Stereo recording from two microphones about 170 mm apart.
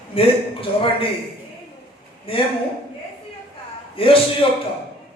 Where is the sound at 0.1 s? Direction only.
35° left (ahead or behind).